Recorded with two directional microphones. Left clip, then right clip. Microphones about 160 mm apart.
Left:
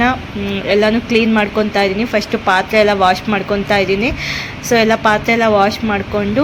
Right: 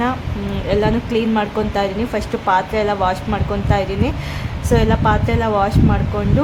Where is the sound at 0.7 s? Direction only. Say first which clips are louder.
Left 5 dB; 10° left (ahead or behind).